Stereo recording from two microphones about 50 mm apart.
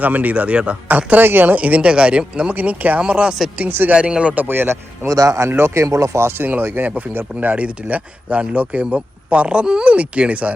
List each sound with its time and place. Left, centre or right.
0.0 s speech: right
0.9 s speech: right
1.5 s speech: right
2.6 s speech: right
3.0 s speech: right
3.7 s speech: right
3.9 s speech: right
4.4 s speech: right
5.5 s speech: right
6.4 s speech: right